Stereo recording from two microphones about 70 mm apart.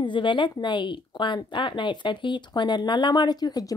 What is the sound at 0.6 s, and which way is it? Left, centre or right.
Speech, left.